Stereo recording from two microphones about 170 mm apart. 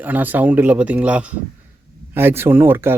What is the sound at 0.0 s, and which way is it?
Speech, 10° right (ahead or behind).